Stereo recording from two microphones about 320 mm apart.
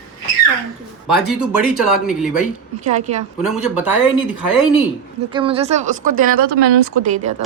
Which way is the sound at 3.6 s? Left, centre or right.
Centre.